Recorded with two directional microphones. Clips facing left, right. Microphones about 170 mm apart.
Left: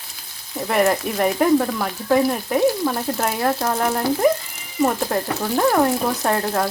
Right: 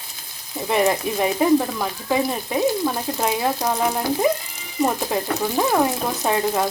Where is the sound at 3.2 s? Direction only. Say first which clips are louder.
Left 1 dB; 15° right (ahead or behind).